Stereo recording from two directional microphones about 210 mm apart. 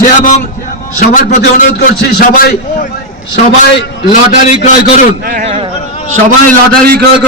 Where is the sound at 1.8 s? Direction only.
50° left (ahead or behind).